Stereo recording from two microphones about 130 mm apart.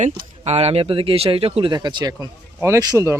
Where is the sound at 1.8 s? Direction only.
30° right (ahead or behind).